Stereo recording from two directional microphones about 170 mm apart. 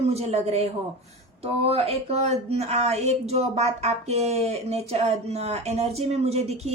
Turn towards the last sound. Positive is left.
turn(degrees=-40)  # may be behind; listen again after turning